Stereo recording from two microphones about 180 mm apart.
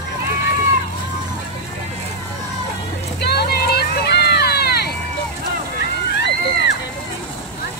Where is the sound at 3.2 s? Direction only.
60° left (ahead or behind).